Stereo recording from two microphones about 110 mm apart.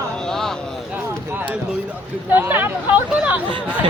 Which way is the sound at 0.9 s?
15° right (ahead or behind).